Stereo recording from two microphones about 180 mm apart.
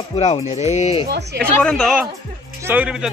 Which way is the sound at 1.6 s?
5° left (ahead or behind).